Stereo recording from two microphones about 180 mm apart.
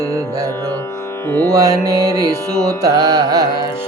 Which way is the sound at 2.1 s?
20° right (ahead or behind).